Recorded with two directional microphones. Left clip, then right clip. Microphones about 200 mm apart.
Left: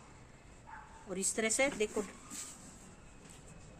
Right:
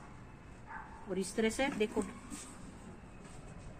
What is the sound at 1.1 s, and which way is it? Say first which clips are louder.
Speech: right 1 dB; 60° left (ahead or behind).